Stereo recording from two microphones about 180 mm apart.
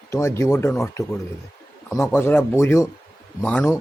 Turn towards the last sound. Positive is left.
turn(degrees=10)  # may be behind; listen again after turning